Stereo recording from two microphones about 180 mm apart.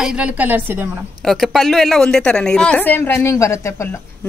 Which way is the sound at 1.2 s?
Centre (ahead or behind).